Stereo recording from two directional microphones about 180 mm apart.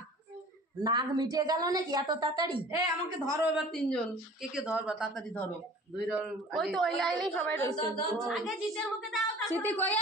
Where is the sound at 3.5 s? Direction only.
Centre (ahead or behind).